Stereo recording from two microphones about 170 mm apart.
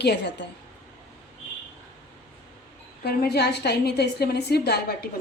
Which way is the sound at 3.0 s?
70° left (ahead or behind).